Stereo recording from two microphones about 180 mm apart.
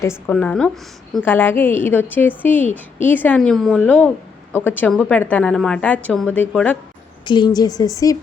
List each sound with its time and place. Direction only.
0.3 s a woman's voice: 10° left (ahead or behind)
7.3 s speech: 25° left (ahead or behind)